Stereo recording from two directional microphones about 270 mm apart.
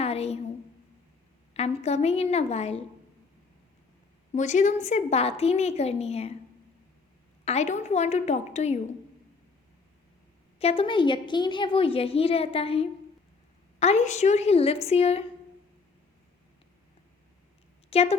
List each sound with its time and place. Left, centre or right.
0.0 s a sound: left
1.8 s a woman's voice: left
4.3 s a woman's voice: left
7.4 s a woman's voice: left
10.6 s a woman's voice: left
17.9 s a woman's voice: left